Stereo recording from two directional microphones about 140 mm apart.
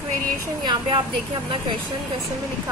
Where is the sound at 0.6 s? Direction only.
35° right (ahead or behind).